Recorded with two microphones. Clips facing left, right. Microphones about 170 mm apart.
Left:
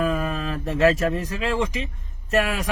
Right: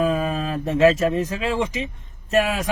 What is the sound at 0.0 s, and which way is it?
Speech, 25° right (ahead or behind).